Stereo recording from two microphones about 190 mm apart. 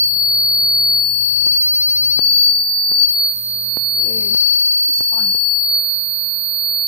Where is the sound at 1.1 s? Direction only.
15° right (ahead or behind).